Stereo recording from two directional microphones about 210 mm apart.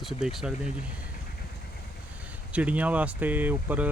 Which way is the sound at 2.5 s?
5° right (ahead or behind).